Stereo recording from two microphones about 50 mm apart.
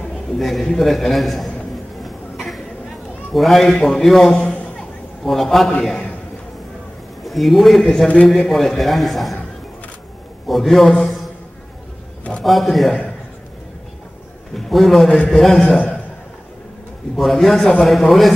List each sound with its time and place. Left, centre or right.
0.4 s a man's voice: centre
2.0 s a sound: centre
3.3 s a man's voice: centre
4.4 s a sound: centre
5.2 s a man's voice: centre
7.2 s a man's voice: centre
10.5 s a man's voice: centre
12.4 s a man's voice: centre
14.5 s a man's voice: centre
17.2 s a man's voice: centre